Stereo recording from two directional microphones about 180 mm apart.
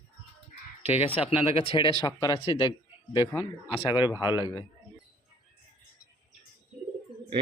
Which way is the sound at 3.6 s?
10° right (ahead or behind).